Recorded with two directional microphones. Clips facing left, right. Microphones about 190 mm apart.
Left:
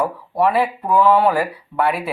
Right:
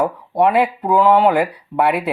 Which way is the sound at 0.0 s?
20° right (ahead or behind).